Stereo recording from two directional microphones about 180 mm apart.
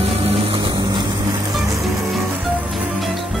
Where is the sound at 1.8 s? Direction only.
Centre (ahead or behind).